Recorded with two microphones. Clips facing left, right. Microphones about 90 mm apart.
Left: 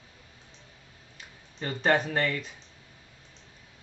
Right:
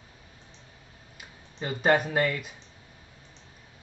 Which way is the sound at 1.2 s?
10° right (ahead or behind).